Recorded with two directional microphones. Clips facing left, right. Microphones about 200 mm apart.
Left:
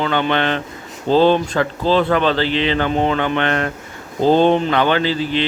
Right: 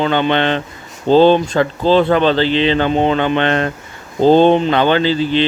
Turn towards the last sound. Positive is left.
turn(degrees=-30)  # may be behind; listen again after turning